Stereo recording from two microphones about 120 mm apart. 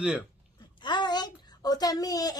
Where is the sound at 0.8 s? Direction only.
40° left (ahead or behind).